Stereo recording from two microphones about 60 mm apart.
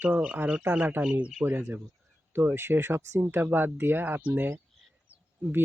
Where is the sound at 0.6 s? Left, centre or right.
Right.